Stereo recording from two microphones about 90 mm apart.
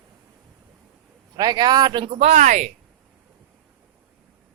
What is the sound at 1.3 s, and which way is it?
Speech, 50° right (ahead or behind).